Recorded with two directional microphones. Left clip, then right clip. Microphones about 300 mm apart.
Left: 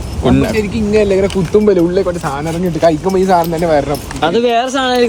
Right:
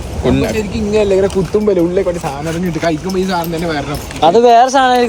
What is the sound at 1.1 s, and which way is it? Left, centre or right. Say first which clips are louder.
Speech: left 1 dB; left.